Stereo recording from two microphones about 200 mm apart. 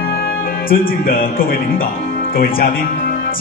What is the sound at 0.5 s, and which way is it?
Speech, 45° left (ahead or behind).